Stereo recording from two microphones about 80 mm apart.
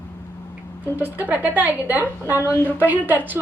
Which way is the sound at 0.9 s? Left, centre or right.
Right.